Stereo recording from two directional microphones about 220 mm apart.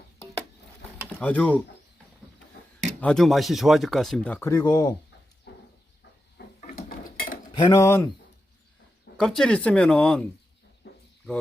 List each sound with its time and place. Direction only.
1.2 s speech: 5° left (ahead or behind)
2.8 s speech: 5° left (ahead or behind)
6.4 s a sound: 50° left (ahead or behind)
7.7 s speech: 10° left (ahead or behind)
9.1 s speech: centre (ahead or behind)
10.8 s cricket: 50° left (ahead or behind)